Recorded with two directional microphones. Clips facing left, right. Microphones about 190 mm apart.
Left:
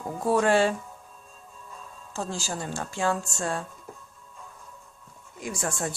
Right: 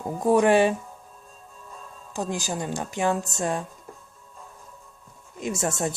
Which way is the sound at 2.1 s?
15° right (ahead or behind).